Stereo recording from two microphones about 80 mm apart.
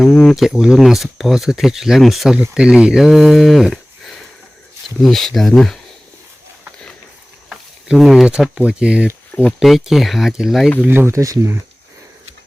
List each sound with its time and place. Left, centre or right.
0.0 s speech: centre
7.5 s speech: centre
9.3 s speech: centre
9.6 s speech: centre
10.8 s speech: right
11.1 s speech: right